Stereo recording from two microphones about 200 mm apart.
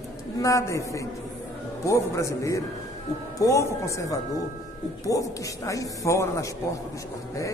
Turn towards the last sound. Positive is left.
turn(degrees=15)  # may be behind; listen again after turning